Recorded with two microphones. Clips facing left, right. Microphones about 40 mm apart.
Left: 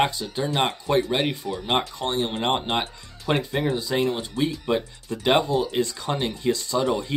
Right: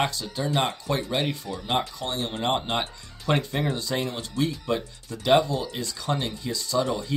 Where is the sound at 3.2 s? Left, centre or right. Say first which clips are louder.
Left 1 dB; centre.